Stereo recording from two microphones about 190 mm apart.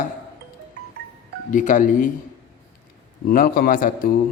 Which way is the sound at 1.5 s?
45° left (ahead or behind).